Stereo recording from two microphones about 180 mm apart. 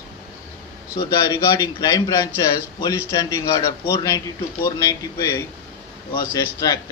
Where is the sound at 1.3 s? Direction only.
15° left (ahead or behind).